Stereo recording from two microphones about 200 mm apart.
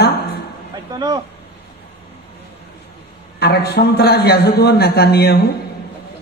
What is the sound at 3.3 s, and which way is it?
A man's voice, 55° left (ahead or behind).